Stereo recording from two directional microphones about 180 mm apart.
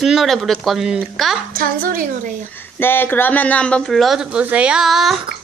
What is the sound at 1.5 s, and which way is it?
Speech, 50° right (ahead or behind).